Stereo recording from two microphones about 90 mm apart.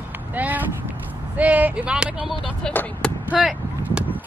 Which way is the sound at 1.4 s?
15° right (ahead or behind).